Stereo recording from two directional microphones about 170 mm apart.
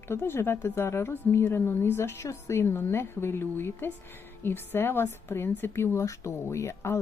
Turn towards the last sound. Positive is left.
turn(degrees=15)  # may be behind; listen again after turning